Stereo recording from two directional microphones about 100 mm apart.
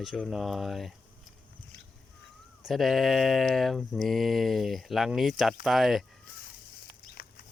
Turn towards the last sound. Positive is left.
turn(degrees=0)  # may be behind; listen again after turning